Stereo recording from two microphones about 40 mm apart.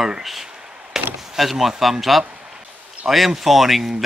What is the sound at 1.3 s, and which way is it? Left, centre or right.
Speech, centre.